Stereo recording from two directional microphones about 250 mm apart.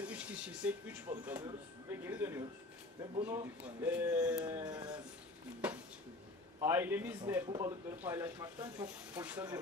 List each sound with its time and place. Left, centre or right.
0.0 s a sound: centre
3.3 s speech: centre
4.5 s speech: centre
5.6 s a sound: centre
6.6 s speech: centre
7.4 s speech: centre